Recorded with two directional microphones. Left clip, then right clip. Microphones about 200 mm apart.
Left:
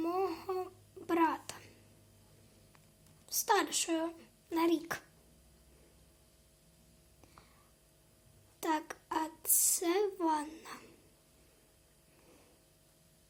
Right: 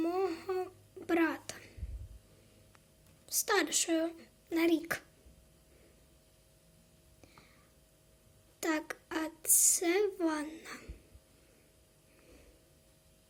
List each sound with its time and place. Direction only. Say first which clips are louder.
0.0 s a sound: right 1 dB; 15° right (ahead or behind)
0.9 s babbling: even; 15° right (ahead or behind)
3.2 s speech: even; 20° right (ahead or behind)
8.6 s a child's voice: even; 15° right (ahead or behind)